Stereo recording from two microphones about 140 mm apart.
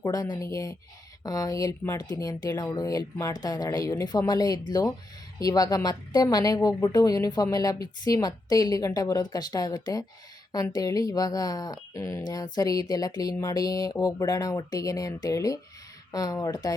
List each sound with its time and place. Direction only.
0.0 s a woman's voice: 25° left (ahead or behind)